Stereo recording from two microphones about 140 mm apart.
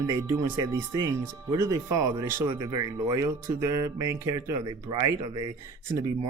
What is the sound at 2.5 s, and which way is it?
Speech, 30° right (ahead or behind).